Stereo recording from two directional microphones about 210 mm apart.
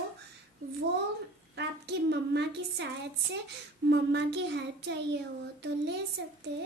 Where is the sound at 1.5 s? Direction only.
55° right (ahead or behind).